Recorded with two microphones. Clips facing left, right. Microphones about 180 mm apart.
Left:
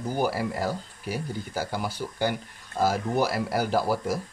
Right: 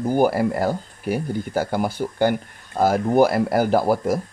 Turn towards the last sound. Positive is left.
turn(degrees=-50)  # may be behind; listen again after turning